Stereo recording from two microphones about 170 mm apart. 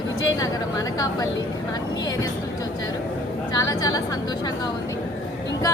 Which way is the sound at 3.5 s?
20° left (ahead or behind).